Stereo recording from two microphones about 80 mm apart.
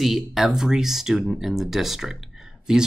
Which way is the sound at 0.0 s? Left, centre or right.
Centre.